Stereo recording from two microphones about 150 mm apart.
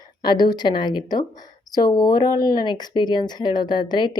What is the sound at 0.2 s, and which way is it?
Speech, 30° left (ahead or behind).